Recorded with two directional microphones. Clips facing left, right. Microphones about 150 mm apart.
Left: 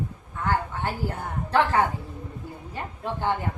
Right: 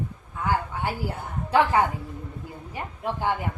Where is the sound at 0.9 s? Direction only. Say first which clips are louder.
Left 2 dB; 10° right (ahead or behind).